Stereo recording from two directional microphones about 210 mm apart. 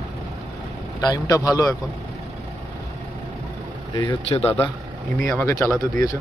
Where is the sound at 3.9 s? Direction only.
20° left (ahead or behind).